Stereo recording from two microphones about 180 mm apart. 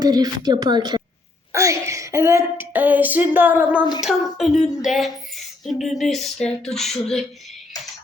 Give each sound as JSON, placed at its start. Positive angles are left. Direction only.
{"t": 0.0, "sound": "a woman's voice", "side_deg": -20}